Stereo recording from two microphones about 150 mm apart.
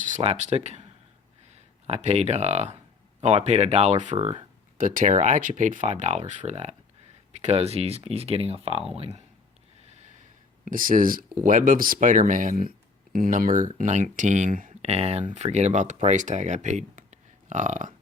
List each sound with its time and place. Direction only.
0.2 s speech: 50° right (ahead or behind)
4.8 s speech: 60° right (ahead or behind); by 9.2 s 40° right (ahead or behind)
10.7 s speech: 65° right (ahead or behind)
14.8 s speech: 45° right (ahead or behind)